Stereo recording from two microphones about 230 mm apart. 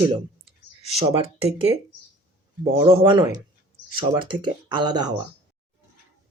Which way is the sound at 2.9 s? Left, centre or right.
Right.